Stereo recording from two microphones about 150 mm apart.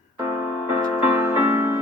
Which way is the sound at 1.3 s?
15° right (ahead or behind).